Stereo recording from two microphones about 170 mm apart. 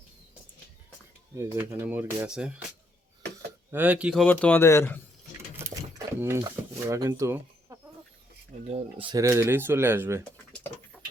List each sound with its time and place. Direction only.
1.4 s speech: 15° right (ahead or behind)
3.7 s a man's voice: 10° right (ahead or behind); by 4.9 s 15° left (ahead or behind)
5.5 s a sound: 15° right (ahead or behind)
8.6 s speech: 35° right (ahead or behind)
9.1 s speech: 15° right (ahead or behind)